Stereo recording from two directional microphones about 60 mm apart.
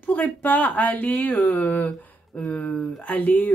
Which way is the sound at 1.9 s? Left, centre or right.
Centre.